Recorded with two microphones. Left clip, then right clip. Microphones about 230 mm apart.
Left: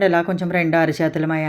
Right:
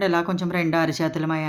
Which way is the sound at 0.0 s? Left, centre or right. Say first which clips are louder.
Left 5 dB; centre.